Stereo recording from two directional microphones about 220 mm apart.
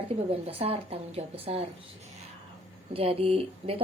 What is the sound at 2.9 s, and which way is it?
Speech, 25° right (ahead or behind).